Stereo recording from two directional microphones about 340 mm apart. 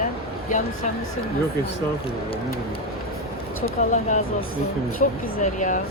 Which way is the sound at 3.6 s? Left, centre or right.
Left.